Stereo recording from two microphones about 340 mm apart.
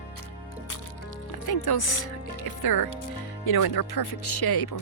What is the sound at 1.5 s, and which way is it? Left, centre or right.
Speech, left.